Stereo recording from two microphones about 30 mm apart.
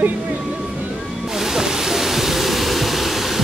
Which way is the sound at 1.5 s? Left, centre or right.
Centre.